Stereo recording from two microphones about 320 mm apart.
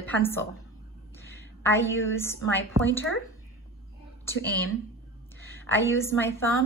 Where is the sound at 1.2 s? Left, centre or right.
Centre.